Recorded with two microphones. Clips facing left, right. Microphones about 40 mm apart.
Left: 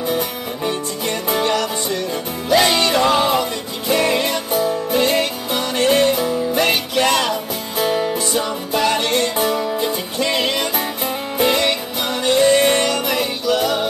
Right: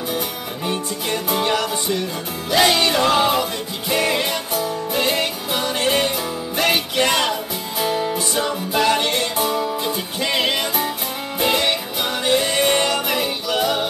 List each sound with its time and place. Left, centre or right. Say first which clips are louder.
1.3 s music: left 2 dB; centre
7.8 s music: left 3 dB; centre
8.4 s music: right 1 dB; centre